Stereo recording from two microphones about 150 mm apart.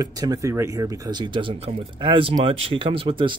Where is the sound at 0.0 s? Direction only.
25° right (ahead or behind).